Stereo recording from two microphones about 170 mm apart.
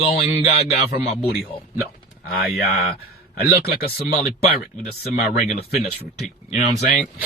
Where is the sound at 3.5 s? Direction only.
65° left (ahead or behind).